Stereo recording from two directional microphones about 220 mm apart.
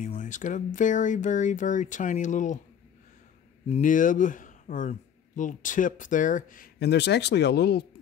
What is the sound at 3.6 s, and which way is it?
Speech, 35° left (ahead or behind).